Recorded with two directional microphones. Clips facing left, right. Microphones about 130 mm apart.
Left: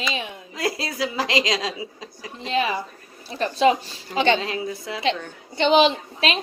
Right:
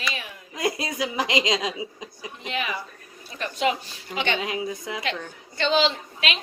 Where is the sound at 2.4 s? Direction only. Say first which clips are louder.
Left 7 dB; 30° left (ahead or behind).